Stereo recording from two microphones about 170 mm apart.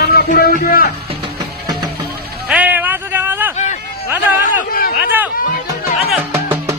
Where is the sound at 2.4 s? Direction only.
10° right (ahead or behind).